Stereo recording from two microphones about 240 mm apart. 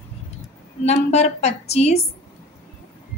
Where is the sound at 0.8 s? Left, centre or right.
Left.